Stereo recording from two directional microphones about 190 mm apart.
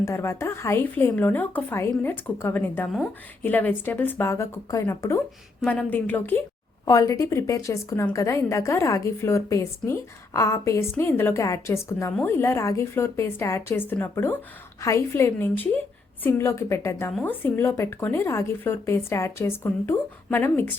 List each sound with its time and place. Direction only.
0.0 s a woman's voice: 15° left (ahead or behind)